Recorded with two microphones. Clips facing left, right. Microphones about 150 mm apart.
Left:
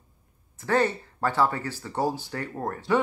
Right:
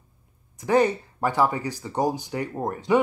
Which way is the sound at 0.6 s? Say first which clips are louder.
Right 4 dB; 15° right (ahead or behind).